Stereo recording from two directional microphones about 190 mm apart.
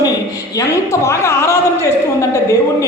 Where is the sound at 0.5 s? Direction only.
15° left (ahead or behind).